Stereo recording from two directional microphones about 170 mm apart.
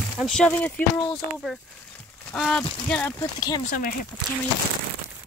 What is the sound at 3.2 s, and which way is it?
Speech, 25° left (ahead or behind).